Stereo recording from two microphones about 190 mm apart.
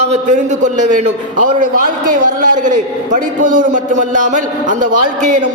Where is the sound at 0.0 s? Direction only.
35° right (ahead or behind).